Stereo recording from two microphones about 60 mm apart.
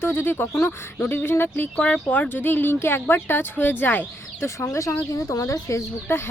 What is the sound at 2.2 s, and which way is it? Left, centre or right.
Speech, left.